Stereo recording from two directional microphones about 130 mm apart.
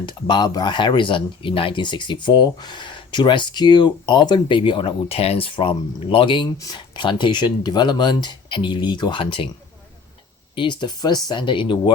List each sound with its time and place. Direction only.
0.0 s speech: 35° left (ahead or behind)
10.5 s speech: 35° left (ahead or behind)